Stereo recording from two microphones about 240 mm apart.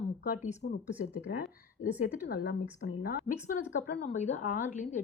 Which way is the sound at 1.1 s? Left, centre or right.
Left.